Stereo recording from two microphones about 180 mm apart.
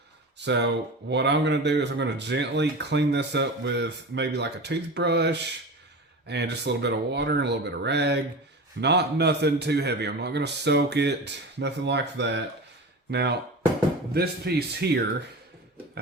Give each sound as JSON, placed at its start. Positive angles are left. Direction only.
{"t": 0.3, "sound": "speech", "side_deg": -75}